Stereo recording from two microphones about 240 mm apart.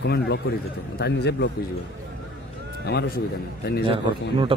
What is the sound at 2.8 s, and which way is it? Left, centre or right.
Speech, left.